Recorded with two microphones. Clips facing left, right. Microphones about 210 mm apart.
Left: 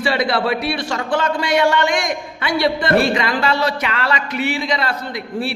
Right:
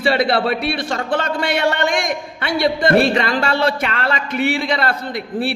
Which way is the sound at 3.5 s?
55° right (ahead or behind).